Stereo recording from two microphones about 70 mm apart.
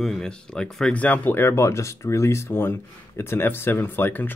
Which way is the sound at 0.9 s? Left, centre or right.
Left.